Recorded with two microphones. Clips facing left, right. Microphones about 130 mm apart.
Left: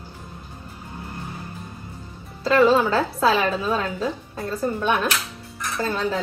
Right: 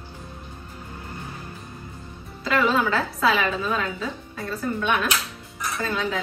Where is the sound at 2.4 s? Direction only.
30° left (ahead or behind).